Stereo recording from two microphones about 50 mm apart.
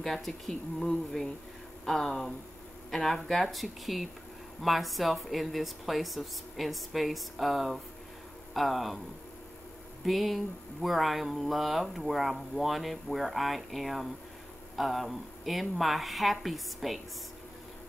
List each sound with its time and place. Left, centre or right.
0.0 s speech: centre
10.0 s speech: centre